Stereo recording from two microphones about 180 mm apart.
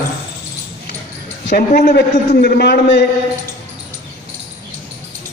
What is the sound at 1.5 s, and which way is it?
A man's voice, 65° left (ahead or behind).